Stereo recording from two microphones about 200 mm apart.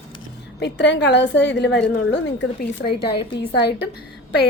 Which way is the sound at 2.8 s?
25° left (ahead or behind).